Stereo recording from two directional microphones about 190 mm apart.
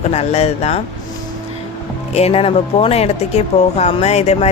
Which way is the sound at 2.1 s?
30° left (ahead or behind).